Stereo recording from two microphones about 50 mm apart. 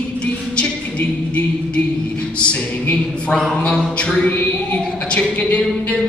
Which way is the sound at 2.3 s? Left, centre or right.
Left.